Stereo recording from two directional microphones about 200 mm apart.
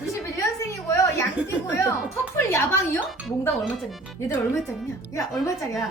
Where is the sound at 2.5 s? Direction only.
15° left (ahead or behind).